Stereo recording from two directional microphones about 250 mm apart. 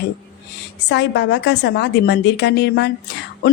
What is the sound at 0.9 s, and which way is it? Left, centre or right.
Speech, left.